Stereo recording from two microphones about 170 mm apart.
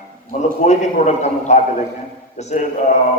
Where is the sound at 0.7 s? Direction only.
40° left (ahead or behind).